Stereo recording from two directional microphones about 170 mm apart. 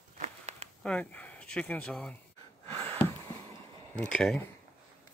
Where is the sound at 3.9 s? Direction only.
5° left (ahead or behind).